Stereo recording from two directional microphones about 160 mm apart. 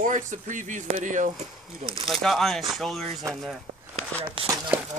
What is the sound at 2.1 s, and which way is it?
Speech, centre (ahead or behind).